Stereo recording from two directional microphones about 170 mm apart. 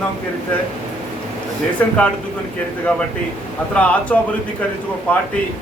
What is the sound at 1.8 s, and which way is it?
Speech, 10° left (ahead or behind).